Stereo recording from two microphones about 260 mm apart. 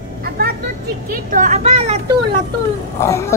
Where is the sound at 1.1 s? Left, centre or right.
Right.